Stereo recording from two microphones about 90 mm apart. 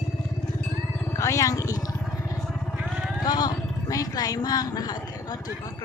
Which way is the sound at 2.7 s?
5° right (ahead or behind).